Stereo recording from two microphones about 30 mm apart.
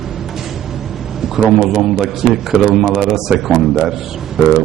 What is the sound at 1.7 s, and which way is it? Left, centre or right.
A man's voice, centre.